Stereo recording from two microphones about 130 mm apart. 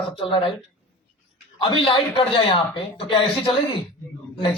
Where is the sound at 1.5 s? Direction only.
40° left (ahead or behind).